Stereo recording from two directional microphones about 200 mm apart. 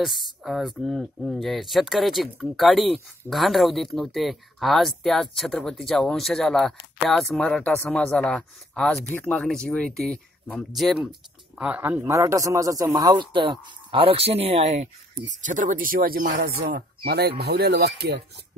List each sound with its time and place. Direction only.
0.0 s speech: centre (ahead or behind); by 16.7 s 40° right (ahead or behind)
16.7 s speech: 50° right (ahead or behind)